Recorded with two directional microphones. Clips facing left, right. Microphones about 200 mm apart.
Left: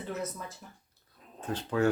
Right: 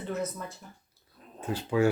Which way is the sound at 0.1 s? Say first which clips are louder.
Right 4 dB; centre (ahead or behind).